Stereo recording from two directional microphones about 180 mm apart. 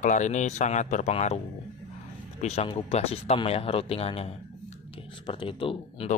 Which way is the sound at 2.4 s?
35° left (ahead or behind).